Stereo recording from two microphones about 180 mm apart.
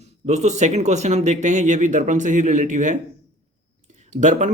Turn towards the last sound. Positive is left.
turn(degrees=-40)  # may be behind; listen again after turning